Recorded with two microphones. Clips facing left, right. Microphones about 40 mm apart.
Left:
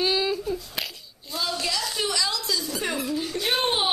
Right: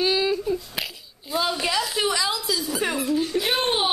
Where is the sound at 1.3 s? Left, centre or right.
Right.